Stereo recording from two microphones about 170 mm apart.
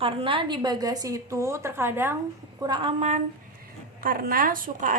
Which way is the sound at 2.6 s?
25° right (ahead or behind).